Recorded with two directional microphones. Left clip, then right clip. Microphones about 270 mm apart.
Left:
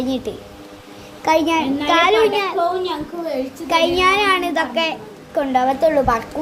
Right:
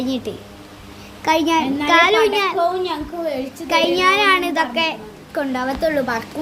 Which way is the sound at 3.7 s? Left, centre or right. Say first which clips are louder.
Even; centre.